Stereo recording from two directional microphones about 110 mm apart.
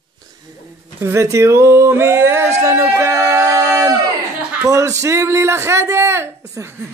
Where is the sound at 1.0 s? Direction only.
25° right (ahead or behind).